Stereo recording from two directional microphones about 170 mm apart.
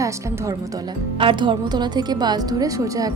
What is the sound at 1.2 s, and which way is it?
A woman's voice, 30° right (ahead or behind).